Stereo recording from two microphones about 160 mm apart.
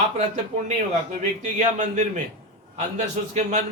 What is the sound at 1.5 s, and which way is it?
Speech, 50° right (ahead or behind).